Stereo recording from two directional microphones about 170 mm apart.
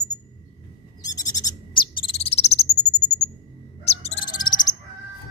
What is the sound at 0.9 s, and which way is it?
Owl, 20° left (ahead or behind).